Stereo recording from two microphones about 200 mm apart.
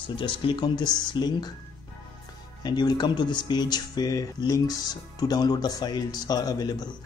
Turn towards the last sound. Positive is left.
turn(degrees=20)  # may be behind; listen again after turning